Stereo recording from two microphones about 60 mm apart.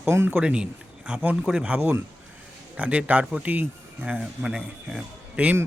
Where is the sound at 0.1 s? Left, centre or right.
Right.